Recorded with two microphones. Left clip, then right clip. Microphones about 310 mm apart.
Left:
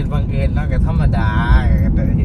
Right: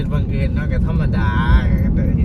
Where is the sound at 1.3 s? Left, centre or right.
Centre.